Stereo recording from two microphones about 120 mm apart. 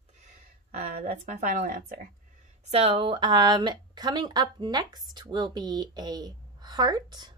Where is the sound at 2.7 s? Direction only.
55° right (ahead or behind); by 7.3 s 35° right (ahead or behind).